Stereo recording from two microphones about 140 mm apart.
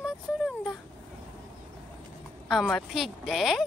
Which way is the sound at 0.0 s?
Centre (ahead or behind).